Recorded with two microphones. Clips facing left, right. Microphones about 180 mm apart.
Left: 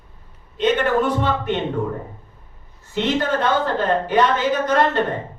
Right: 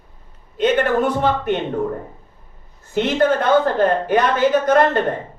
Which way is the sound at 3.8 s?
50° right (ahead or behind).